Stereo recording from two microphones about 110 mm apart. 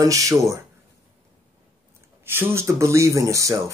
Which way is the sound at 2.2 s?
20° right (ahead or behind).